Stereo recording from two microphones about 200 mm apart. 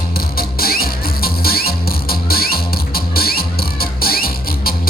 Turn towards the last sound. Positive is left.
turn(degrees=50)  # may be behind; listen again after turning